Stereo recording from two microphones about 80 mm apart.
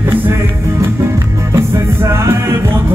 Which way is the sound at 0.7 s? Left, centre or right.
Right.